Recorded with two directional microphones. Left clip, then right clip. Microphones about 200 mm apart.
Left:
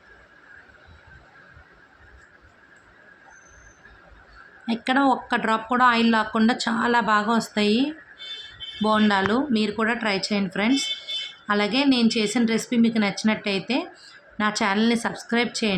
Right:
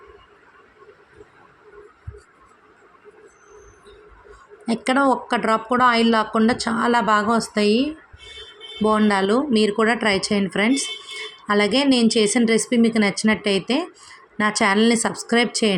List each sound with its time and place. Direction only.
4.6 s speech: 10° right (ahead or behind)